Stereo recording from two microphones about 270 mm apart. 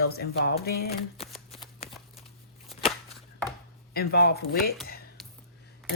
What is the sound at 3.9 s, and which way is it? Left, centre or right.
Speech, left.